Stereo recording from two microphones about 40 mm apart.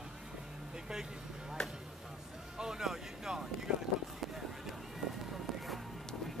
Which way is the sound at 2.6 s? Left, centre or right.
Centre.